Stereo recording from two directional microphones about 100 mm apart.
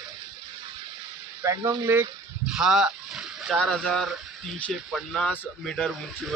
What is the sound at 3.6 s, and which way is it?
Speech, 5° left (ahead or behind).